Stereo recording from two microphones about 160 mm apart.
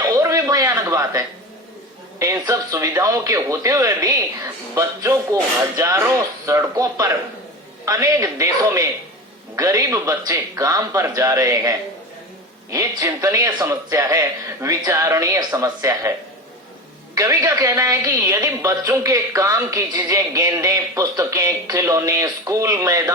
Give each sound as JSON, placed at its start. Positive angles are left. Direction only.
{"t": 0.0, "sound": "a sound", "side_deg": -20}
{"t": 2.1, "sound": "a woman's voice", "side_deg": -25}
{"t": 12.7, "sound": "a woman's voice", "side_deg": -20}
{"t": 17.2, "sound": "a woman's voice", "side_deg": -15}